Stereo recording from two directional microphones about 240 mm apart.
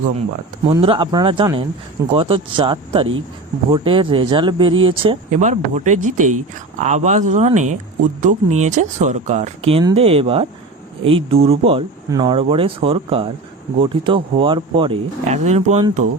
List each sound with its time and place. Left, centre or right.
0.8 s speech: right